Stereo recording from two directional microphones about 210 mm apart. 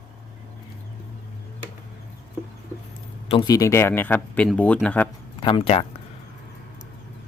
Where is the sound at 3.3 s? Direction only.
20° left (ahead or behind); by 5.0 s 5° left (ahead or behind).